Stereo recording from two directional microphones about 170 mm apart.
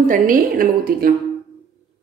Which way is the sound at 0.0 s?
50° right (ahead or behind).